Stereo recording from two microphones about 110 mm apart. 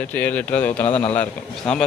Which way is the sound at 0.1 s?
15° left (ahead or behind).